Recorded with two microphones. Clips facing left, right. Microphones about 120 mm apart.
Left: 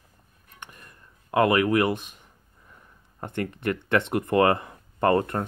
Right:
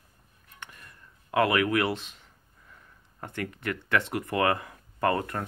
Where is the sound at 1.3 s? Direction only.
30° left (ahead or behind).